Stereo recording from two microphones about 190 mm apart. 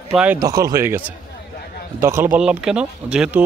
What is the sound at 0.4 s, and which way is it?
Speech, 20° right (ahead or behind).